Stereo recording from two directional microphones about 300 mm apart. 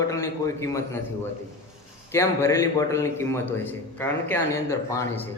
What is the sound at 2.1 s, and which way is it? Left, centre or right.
A man's voice, centre.